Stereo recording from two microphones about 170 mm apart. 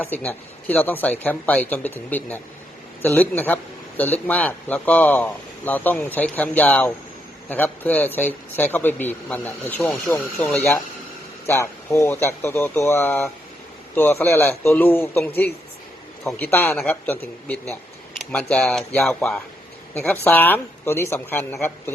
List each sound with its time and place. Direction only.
0.0 s speech: 10° left (ahead or behind)